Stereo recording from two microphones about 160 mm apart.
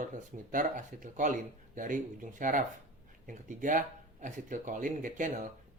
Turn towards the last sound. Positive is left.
turn(degrees=-55)  # may be behind; listen again after turning